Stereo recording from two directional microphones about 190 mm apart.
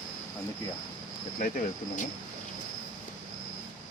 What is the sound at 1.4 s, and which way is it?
Speech, 45° left (ahead or behind).